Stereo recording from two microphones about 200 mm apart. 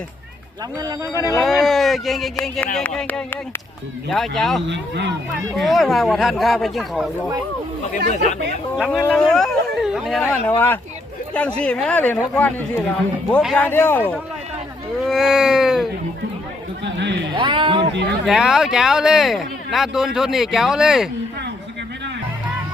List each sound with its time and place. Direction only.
1.1 s speech: 15° left (ahead or behind)
1.4 s speech: centre (ahead or behind)
4.7 s speech: 65° right (ahead or behind)
5.5 s speech: centre (ahead or behind)
8.1 s speech: 35° left (ahead or behind)
8.8 s speech: 5° left (ahead or behind)
10.2 s speech: 10° left (ahead or behind)
15.0 s speech: centre (ahead or behind)
16.8 s speech: 60° right (ahead or behind)
17.3 s speech: 25° right (ahead or behind)
18.3 s speech: centre (ahead or behind)